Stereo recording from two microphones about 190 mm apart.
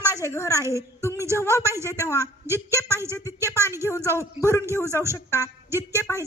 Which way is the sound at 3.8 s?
15° left (ahead or behind).